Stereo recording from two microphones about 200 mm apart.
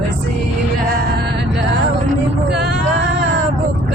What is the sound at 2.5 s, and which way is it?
Male singing, 55° right (ahead or behind).